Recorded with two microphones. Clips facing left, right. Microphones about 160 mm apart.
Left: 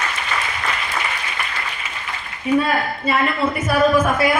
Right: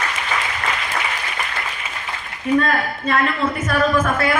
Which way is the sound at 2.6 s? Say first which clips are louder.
Even; 10° left (ahead or behind).